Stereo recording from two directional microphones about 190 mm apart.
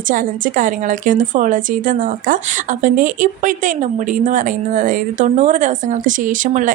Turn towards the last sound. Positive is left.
turn(degrees=-45)  # may be behind; listen again after turning